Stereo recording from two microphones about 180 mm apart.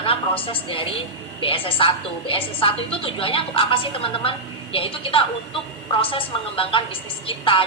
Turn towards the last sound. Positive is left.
turn(degrees=30)  # may be behind; listen again after turning